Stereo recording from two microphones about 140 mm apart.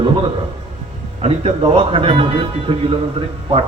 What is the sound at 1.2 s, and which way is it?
A man's voice, 45° right (ahead or behind).